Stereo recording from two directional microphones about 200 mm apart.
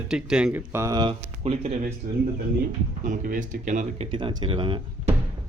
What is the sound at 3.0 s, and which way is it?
Speech, 40° right (ahead or behind).